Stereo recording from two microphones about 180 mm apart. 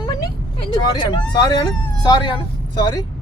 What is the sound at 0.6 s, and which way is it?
Speech, 25° left (ahead or behind).